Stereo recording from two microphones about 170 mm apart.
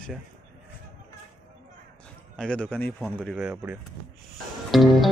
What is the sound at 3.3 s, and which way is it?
Speech, 5° right (ahead or behind).